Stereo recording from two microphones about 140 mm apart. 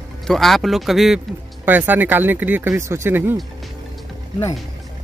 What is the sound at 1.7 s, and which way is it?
Speech, 15° right (ahead or behind).